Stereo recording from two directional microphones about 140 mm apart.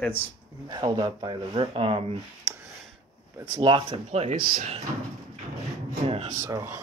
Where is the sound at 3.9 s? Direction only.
55° right (ahead or behind).